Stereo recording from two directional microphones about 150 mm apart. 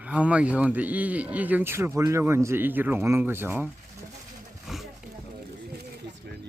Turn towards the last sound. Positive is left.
turn(degrees=0)  # may be behind; listen again after turning